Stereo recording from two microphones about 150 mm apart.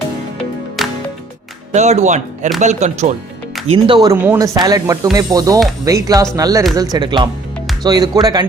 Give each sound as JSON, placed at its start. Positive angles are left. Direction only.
{"t": 0.8, "sound": "music", "side_deg": 0}
{"t": 1.7, "sound": "speech", "side_deg": -50}
{"t": 3.7, "sound": "speech", "side_deg": -30}